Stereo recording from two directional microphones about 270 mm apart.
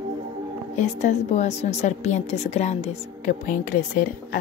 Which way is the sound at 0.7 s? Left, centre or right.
Left.